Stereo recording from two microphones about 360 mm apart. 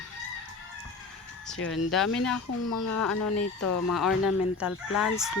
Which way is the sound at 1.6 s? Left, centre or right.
Left.